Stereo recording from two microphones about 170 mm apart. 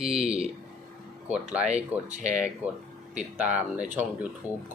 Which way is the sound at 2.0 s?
45° right (ahead or behind).